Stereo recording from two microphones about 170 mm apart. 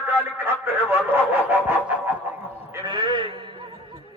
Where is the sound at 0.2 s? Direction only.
10° right (ahead or behind).